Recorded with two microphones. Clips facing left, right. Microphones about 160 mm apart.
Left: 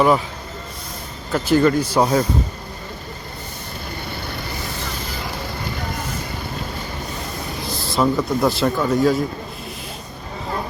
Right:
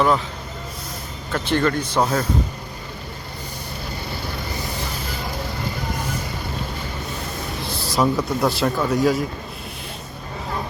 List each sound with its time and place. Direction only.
1.3 s a man's voice: 5° left (ahead or behind)
7.7 s a sound: 35° right (ahead or behind)
7.9 s speech: centre (ahead or behind)